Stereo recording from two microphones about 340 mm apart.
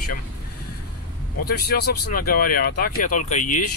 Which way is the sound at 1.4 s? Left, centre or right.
Left.